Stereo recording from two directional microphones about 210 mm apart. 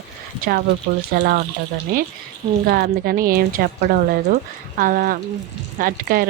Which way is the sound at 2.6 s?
45° right (ahead or behind).